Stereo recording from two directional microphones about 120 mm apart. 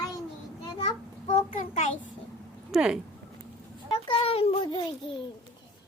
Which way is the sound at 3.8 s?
45° left (ahead or behind).